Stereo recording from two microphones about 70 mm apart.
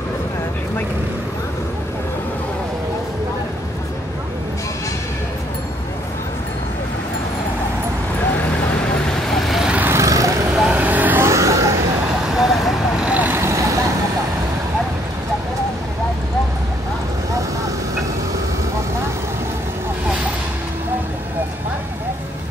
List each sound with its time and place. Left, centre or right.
9.8 s vehicle: right
10.7 s vehicle: right
11.2 s vehicle: right
12.3 s vehicle: centre
13.0 s vehicle: right
13.4 s vehicle: right